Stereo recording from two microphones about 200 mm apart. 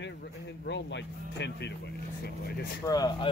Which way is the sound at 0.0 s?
60° left (ahead or behind).